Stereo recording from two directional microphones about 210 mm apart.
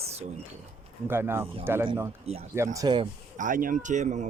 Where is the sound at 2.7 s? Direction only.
20° right (ahead or behind).